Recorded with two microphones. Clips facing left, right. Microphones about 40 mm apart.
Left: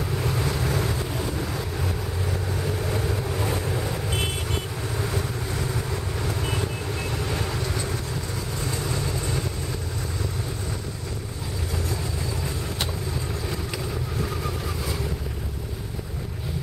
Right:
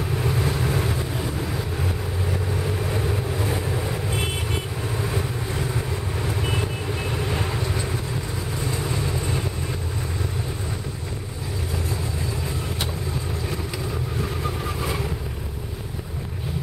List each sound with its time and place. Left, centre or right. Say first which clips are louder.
0.3 s boat: right 2 dB; right
6.4 s vehicle: right 2 dB; right